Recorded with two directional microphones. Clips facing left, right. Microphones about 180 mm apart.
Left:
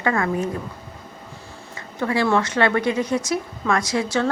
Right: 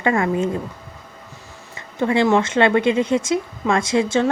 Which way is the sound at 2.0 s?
20° right (ahead or behind).